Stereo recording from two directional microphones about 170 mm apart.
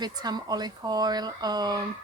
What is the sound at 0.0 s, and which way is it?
Speech, 25° right (ahead or behind).